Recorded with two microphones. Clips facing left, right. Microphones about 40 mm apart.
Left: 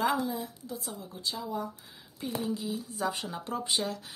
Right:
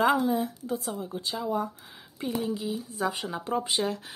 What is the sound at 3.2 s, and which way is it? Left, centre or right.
Speech, right.